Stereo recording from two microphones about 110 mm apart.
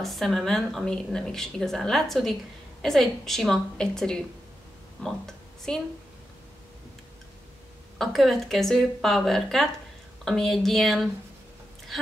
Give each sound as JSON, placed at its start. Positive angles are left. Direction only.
{"t": 0.0, "sound": "a woman's voice", "side_deg": 0}
{"t": 8.0, "sound": "a woman's voice", "side_deg": 0}